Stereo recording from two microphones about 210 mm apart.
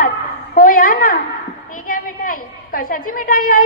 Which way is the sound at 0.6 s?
40° left (ahead or behind).